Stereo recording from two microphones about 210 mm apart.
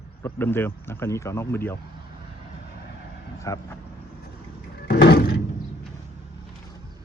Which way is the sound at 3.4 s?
15° left (ahead or behind).